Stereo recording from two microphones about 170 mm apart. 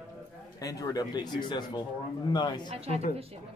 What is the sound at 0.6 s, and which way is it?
Speech, 20° left (ahead or behind).